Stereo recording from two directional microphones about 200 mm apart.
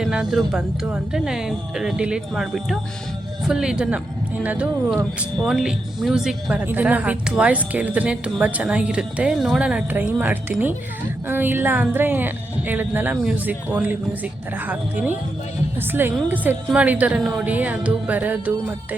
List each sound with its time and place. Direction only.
0.0 s speech: 5° right (ahead or behind)